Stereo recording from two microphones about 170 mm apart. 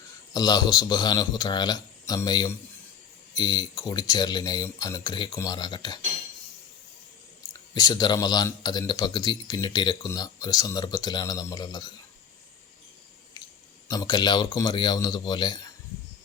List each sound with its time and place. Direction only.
0.3 s speech: 25° left (ahead or behind)
7.7 s speech: 25° left (ahead or behind)
13.8 s speech: 20° left (ahead or behind)